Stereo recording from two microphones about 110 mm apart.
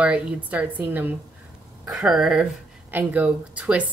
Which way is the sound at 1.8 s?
5° right (ahead or behind).